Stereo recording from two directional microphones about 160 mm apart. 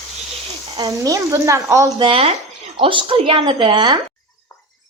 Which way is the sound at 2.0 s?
35° right (ahead or behind).